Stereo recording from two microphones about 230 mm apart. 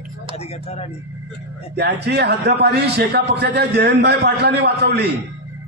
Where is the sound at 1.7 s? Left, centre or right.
Right.